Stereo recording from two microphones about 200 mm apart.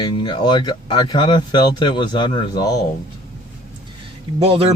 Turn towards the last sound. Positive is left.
turn(degrees=-30)  # may be behind; listen again after turning